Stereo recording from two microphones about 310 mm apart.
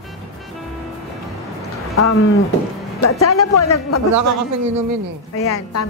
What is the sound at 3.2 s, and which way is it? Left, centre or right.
Speech, left.